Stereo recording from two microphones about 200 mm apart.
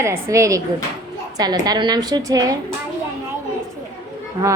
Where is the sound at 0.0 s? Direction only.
15° right (ahead or behind).